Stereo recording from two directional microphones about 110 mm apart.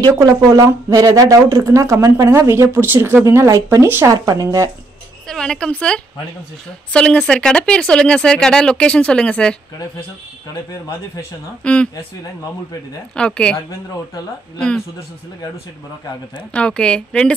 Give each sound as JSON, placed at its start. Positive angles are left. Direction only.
{"t": 0.5, "sound": "speech", "side_deg": -30}
{"t": 4.1, "sound": "speech", "side_deg": -35}
{"t": 5.3, "sound": "speech", "side_deg": 5}
{"t": 11.6, "sound": "speech", "side_deg": 10}
{"t": 13.1, "sound": "speech", "side_deg": 10}
{"t": 16.5, "sound": "speech", "side_deg": 10}